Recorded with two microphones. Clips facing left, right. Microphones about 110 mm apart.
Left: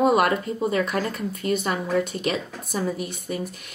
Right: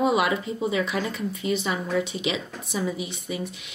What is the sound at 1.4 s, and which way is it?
Speech, 50° left (ahead or behind).